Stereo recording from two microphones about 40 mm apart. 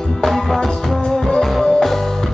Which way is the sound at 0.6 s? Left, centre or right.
Centre.